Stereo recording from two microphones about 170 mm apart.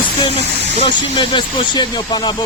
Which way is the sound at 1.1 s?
30° left (ahead or behind).